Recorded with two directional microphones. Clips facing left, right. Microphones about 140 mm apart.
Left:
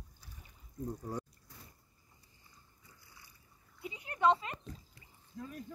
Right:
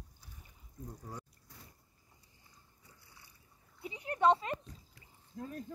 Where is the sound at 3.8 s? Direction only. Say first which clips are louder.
Right 1 dB; 35° right (ahead or behind).